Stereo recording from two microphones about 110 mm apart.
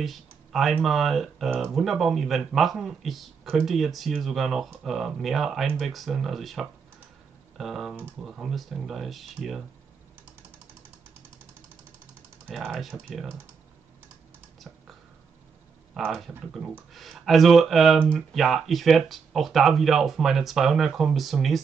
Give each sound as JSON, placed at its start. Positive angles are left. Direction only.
{"t": 0.0, "sound": "speech", "side_deg": 0}
{"t": 12.4, "sound": "speech", "side_deg": 0}
{"t": 16.0, "sound": "speech", "side_deg": 0}